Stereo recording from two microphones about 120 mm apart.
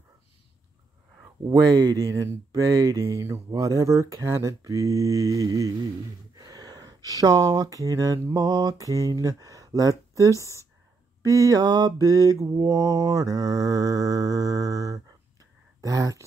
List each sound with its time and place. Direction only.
1.5 s speech: 35° right (ahead or behind)